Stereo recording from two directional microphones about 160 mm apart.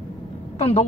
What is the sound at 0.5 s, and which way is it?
Speech, 40° left (ahead or behind).